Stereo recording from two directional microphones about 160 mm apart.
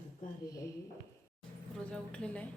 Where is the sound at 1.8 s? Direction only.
5° left (ahead or behind).